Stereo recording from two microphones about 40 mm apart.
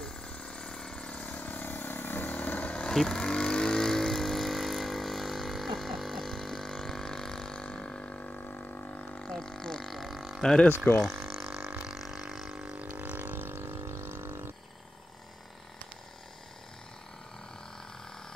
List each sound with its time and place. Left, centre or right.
0.0 s vehicle: left
1.1 s vehicle: left
2.9 s speech: centre
3.2 s vehicle: centre
7.6 s a sound: left
8.5 s a sound: left
9.3 s didgeridoo: centre
9.8 s a sound: centre
10.4 s speech: centre
11.2 s water: centre
11.9 s didgeridoo: centre
12.9 s boat: right